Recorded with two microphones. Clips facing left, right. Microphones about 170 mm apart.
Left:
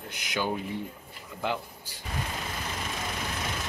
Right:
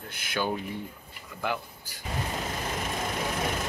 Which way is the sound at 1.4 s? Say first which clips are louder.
Even; 25° left (ahead or behind).